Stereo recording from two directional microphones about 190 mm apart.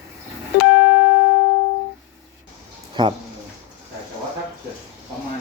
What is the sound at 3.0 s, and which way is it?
Speech, 25° right (ahead or behind).